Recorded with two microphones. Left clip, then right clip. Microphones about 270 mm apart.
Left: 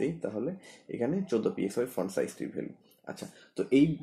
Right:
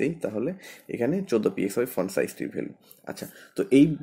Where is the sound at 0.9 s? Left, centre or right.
Right.